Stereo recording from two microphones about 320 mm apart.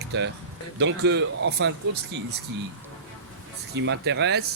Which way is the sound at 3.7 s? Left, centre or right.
Right.